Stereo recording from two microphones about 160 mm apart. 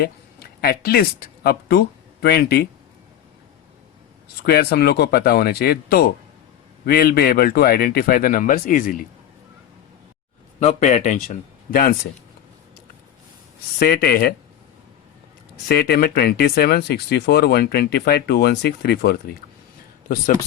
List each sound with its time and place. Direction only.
0.0 s a sound: 75° left (ahead or behind)
1.5 s speech: 80° left
4.4 s speech: 75° left (ahead or behind); by 9.0 s 60° left (ahead or behind)
10.6 s speech: 45° left (ahead or behind)
11.7 s speech: 65° left (ahead or behind)
13.7 s speech: 75° left (ahead or behind)
15.7 s speech: 75° left (ahead or behind)